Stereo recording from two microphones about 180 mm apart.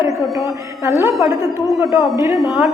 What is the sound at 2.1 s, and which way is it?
Speech, 15° right (ahead or behind).